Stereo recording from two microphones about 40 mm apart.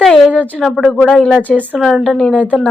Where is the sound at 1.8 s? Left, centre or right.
Centre.